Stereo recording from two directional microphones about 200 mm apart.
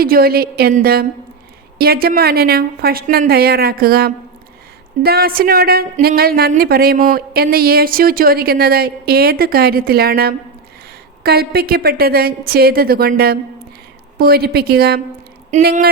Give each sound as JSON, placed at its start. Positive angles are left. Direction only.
{"t": 0.0, "sound": "speech", "side_deg": -50}
{"t": 15.5, "sound": "speech", "side_deg": -35}